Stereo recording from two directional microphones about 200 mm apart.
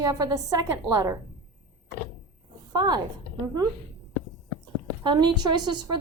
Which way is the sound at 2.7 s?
20° right (ahead or behind).